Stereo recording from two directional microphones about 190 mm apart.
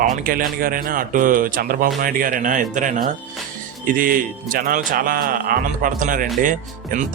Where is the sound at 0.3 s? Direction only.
50° right (ahead or behind).